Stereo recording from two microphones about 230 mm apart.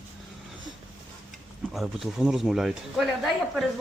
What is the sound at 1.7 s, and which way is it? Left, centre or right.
Speech, centre.